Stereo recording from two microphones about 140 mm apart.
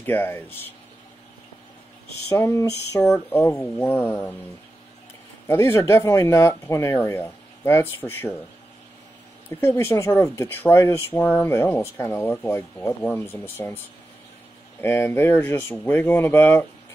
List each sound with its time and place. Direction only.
0.0 s speech: 15° left (ahead or behind)
2.2 s speech: 20° left (ahead or behind)
5.5 s speech: 20° left (ahead or behind)
9.6 s speech: 15° left (ahead or behind)